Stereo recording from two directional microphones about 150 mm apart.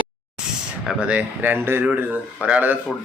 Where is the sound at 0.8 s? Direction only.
10° right (ahead or behind).